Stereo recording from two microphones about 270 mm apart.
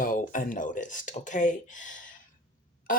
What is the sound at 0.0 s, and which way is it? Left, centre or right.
Speech, left.